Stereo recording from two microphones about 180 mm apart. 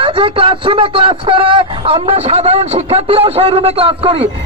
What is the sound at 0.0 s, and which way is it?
Speech, 30° right (ahead or behind).